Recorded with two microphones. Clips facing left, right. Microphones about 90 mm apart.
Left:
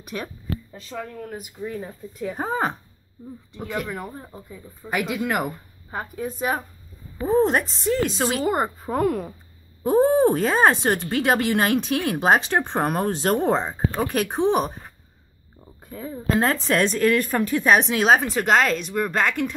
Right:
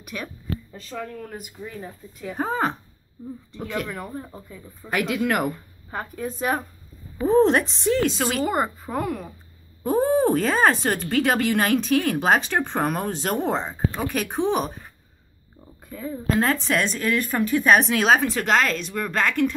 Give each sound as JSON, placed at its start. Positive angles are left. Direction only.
{"t": 0.0, "sound": "speech", "side_deg": 30}
{"t": 0.7, "sound": "speech", "side_deg": 15}
{"t": 8.2, "sound": "speech", "side_deg": 30}
{"t": 8.9, "sound": "speech", "side_deg": 45}
{"t": 9.8, "sound": "speech", "side_deg": 25}
{"t": 13.0, "sound": "speech", "side_deg": 40}
{"t": 15.8, "sound": "speech", "side_deg": 30}